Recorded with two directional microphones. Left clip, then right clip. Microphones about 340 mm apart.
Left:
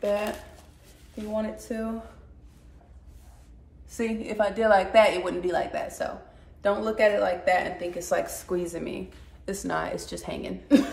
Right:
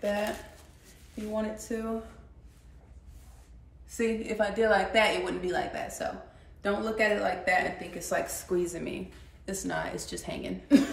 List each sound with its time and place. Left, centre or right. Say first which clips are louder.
1.1 s speech: left 3 dB; centre
3.9 s speech: even; centre